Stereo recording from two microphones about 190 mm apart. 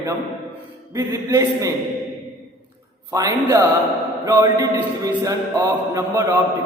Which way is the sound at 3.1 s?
15° right (ahead or behind).